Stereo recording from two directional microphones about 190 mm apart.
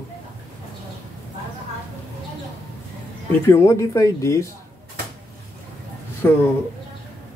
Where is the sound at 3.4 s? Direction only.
15° left (ahead or behind).